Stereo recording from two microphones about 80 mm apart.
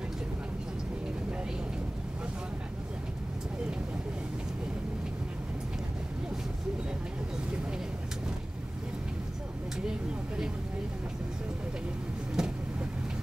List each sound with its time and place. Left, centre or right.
9.8 s vehicle: centre
12.4 s vehicle: centre